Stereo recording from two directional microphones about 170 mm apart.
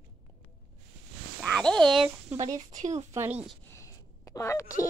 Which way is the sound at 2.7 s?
45° right (ahead or behind).